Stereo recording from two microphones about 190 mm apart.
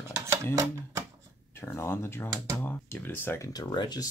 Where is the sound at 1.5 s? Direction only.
15° left (ahead or behind).